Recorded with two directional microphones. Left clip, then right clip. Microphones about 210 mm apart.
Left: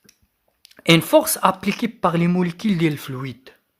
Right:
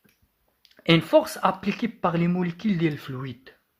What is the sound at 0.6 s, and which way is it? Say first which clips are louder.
Speech: left 5 dB; 30° left (ahead or behind).